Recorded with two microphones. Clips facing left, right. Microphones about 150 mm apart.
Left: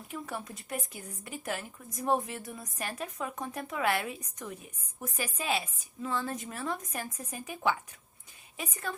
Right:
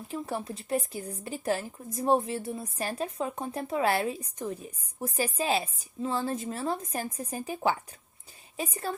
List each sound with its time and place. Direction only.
0.1 s a woman's voice: 30° right (ahead or behind)